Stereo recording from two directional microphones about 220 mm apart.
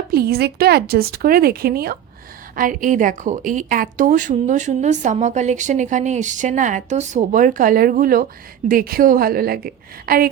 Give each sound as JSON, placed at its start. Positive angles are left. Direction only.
{"t": 0.1, "sound": "a woman's voice", "side_deg": -45}